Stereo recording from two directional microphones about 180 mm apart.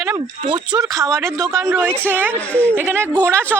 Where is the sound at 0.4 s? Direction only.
25° right (ahead or behind).